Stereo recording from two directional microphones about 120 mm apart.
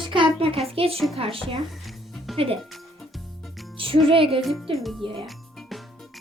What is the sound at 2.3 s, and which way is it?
Music, centre (ahead or behind).